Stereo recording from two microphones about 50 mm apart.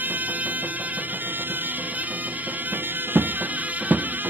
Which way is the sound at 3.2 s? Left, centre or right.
Right.